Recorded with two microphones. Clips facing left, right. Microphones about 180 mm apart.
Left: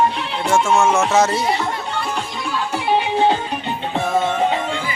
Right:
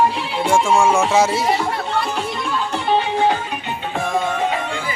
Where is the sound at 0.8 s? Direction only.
10° right (ahead or behind).